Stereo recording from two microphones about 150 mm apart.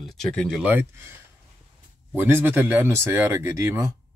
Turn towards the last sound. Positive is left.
turn(degrees=-20)  # may be behind; listen again after turning